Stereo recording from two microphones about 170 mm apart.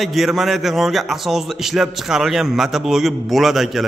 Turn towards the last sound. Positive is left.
turn(degrees=0)  # may be behind; listen again after turning